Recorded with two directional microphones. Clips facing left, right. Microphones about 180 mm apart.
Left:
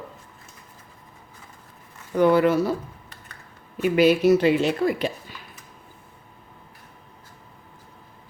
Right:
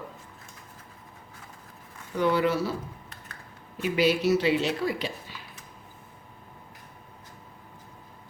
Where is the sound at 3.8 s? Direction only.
55° left (ahead or behind).